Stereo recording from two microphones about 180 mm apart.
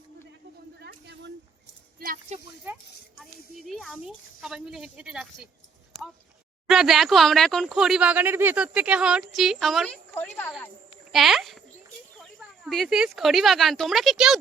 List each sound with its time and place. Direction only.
0.8 s a sound: 70° right (ahead or behind)
3.7 s speech: centre (ahead or behind)
6.7 s speech: centre (ahead or behind)
11.1 s speech: centre (ahead or behind)